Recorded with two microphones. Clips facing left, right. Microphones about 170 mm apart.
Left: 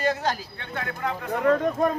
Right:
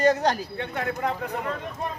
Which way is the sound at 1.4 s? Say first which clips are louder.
Left 10 dB; 45° left (ahead or behind).